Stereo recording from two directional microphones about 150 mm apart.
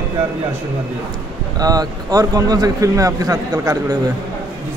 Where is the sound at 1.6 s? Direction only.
25° right (ahead or behind).